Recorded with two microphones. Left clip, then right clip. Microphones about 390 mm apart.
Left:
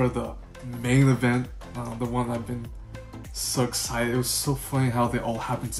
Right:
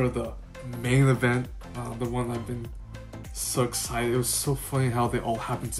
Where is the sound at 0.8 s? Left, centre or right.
Centre.